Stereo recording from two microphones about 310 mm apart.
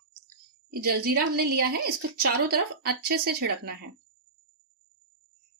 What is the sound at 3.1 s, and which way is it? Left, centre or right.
Speech, right.